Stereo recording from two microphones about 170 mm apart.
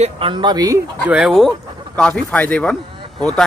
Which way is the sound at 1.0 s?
5° right (ahead or behind).